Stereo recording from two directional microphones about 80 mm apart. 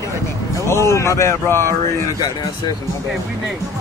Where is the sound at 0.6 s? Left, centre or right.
Left.